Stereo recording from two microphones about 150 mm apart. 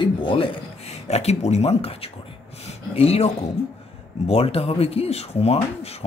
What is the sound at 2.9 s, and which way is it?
Speech, 40° left (ahead or behind).